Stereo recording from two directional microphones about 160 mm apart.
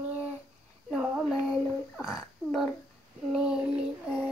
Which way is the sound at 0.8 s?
Centre (ahead or behind).